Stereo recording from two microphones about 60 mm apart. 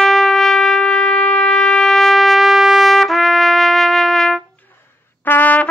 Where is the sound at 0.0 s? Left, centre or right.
Centre.